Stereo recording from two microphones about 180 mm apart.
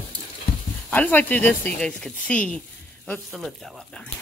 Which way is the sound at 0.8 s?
10° left (ahead or behind).